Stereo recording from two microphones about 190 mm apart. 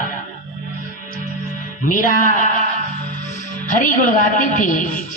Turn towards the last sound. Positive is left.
turn(degrees=45)  # may be behind; listen again after turning